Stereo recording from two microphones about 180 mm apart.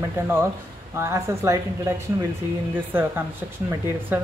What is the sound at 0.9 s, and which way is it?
Speech, 15° right (ahead or behind).